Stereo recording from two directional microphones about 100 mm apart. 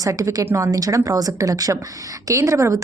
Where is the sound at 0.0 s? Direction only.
35° right (ahead or behind).